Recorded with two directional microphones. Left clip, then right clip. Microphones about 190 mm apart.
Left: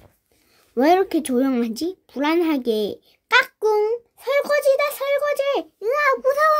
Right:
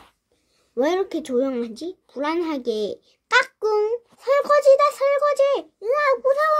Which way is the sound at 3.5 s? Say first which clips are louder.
Left 2 dB; 25° left (ahead or behind).